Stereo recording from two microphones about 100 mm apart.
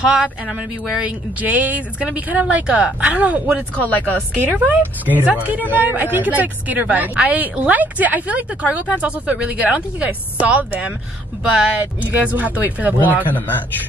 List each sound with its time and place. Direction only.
0.9 s a woman's voice: 15° right (ahead or behind)
3.9 s a woman's voice: 15° left (ahead or behind)
4.4 s a woman's voice: 15° right (ahead or behind)
11.8 s a woman's voice: 15° right (ahead or behind)